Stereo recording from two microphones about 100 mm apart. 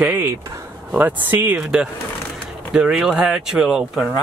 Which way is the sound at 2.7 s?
5° right (ahead or behind).